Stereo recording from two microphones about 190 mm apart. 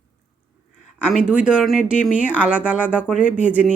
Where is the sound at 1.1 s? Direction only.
5° right (ahead or behind).